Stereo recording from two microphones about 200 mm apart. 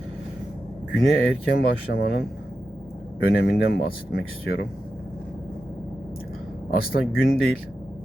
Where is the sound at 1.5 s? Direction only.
50° left (ahead or behind).